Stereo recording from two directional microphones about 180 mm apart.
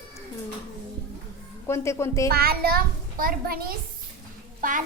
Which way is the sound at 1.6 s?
15° left (ahead or behind).